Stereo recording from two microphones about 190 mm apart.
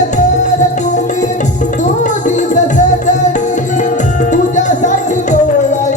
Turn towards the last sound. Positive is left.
turn(degrees=40)  # may be behind; listen again after turning